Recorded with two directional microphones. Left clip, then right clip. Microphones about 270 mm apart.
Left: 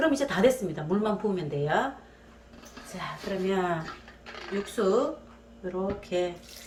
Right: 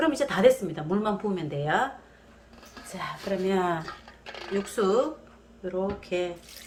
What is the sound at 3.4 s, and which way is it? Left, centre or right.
Speech, right.